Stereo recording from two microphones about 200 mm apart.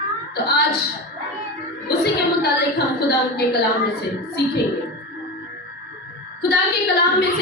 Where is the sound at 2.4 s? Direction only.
55° left (ahead or behind).